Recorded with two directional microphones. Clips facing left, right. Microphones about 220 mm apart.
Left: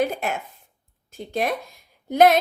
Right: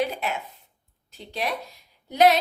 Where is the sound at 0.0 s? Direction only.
45° left (ahead or behind).